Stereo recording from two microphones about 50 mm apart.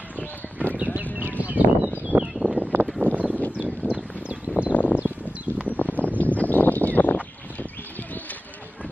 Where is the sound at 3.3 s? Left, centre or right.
Left.